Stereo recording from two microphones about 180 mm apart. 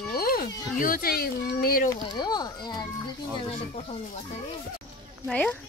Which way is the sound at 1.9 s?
20° left (ahead or behind).